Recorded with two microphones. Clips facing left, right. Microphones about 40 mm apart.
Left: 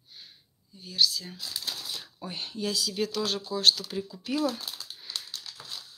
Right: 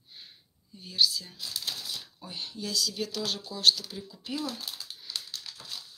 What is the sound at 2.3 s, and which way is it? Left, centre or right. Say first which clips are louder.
Speech: left 4 dB; left.